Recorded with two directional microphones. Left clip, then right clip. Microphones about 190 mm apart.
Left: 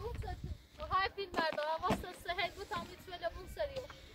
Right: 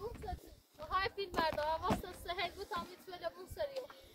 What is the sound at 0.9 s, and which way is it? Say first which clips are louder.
Speech: left 2 dB; 35° right (ahead or behind).